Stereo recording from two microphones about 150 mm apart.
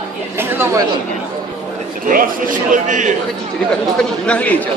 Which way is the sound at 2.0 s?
65° right (ahead or behind).